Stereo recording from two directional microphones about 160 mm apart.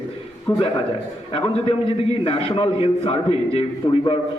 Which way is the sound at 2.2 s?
35° left (ahead or behind).